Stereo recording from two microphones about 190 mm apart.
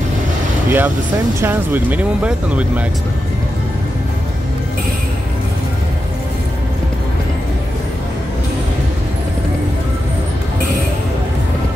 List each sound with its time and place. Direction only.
0.7 s speech: 10° right (ahead or behind)